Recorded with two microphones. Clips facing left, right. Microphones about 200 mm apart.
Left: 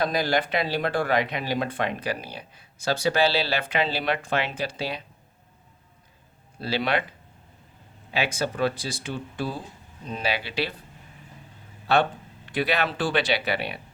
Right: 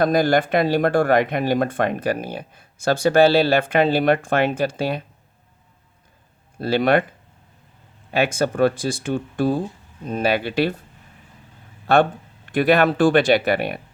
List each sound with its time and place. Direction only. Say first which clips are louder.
0.0 s speech: right 7 dB; 50° right (ahead or behind)
6.6 s speech: right 8 dB; 50° right (ahead or behind)
8.1 s speech: right 7 dB; 50° right (ahead or behind)
11.9 s speech: right 6 dB; 50° right (ahead or behind)